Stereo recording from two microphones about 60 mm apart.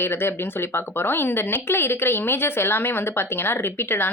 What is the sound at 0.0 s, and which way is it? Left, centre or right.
Speech, left.